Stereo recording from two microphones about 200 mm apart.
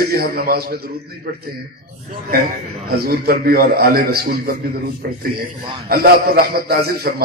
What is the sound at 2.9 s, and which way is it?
A man's voice, 50° right (ahead or behind).